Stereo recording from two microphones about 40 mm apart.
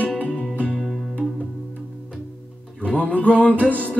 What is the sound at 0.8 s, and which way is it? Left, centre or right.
Music, centre.